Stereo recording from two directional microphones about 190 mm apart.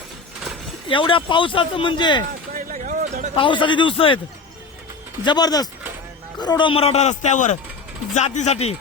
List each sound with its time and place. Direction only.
0.9 s speech: 25° left (ahead or behind)
2.5 s a sound: 45° right (ahead or behind)
3.3 s speech: 25° left (ahead or behind)
5.2 s a man's voice: 20° left (ahead or behind)